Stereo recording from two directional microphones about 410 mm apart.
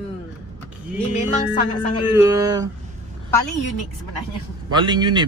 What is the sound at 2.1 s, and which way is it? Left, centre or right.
Speech, centre.